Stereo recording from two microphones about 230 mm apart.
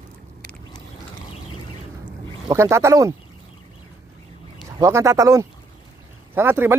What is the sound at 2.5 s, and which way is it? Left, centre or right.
Speech, centre.